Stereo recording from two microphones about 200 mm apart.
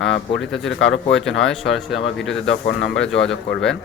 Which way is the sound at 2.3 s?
65° left (ahead or behind).